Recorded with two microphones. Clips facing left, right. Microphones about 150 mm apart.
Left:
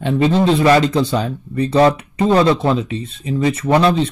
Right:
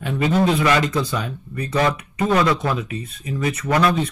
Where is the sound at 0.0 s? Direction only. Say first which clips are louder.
Left 4 dB; 25° left (ahead or behind).